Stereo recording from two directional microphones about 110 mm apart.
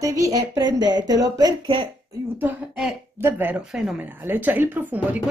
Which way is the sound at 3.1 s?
20° right (ahead or behind).